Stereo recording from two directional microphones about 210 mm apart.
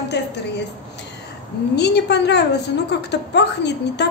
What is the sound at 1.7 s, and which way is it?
A woman's voice, 55° left (ahead or behind).